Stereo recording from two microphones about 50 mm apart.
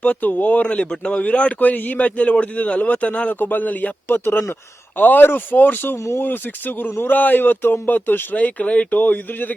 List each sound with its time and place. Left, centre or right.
0.0 s speech: left
4.1 s speech: left
9.0 s speech: left